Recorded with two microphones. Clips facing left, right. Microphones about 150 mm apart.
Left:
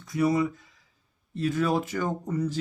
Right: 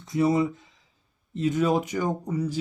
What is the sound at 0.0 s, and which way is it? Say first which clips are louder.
Speech: right 2 dB; 25° right (ahead or behind).